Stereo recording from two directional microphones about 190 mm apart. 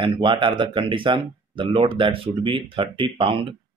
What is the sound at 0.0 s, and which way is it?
Speech, 25° right (ahead or behind).